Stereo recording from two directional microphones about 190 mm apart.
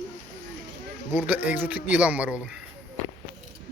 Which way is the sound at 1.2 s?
10° right (ahead or behind).